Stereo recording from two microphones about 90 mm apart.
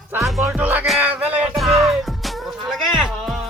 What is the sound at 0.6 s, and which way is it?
Music, 20° right (ahead or behind).